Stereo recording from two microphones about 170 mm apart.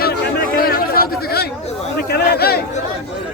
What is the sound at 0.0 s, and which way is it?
Chatter, 70° left (ahead or behind).